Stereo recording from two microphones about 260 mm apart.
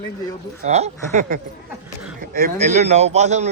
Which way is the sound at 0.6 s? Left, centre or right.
Right.